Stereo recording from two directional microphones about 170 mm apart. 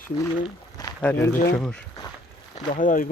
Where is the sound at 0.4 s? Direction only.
20° left (ahead or behind).